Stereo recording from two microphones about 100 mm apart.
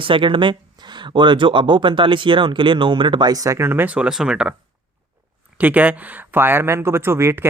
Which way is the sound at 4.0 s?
5° right (ahead or behind).